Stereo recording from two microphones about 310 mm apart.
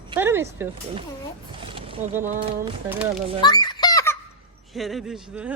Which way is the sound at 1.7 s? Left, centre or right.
Centre.